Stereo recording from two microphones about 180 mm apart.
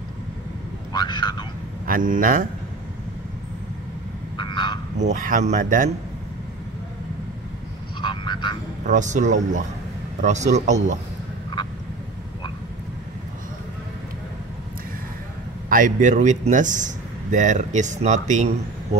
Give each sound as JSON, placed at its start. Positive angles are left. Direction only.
{"t": 0.9, "sound": "speech", "side_deg": 25}
{"t": 1.9, "sound": "speech", "side_deg": -50}
{"t": 4.4, "sound": "a sound", "side_deg": 25}
{"t": 4.9, "sound": "speech", "side_deg": -45}
{"t": 8.0, "sound": "frog", "side_deg": 25}
{"t": 8.8, "sound": "speech", "side_deg": -45}
{"t": 15.7, "sound": "speech", "side_deg": -45}